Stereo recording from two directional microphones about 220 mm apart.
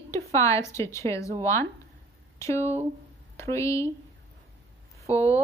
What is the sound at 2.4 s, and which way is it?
A woman's voice, 15° left (ahead or behind).